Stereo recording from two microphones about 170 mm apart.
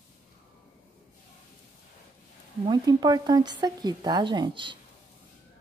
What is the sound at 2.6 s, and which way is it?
Speech, 25° right (ahead or behind).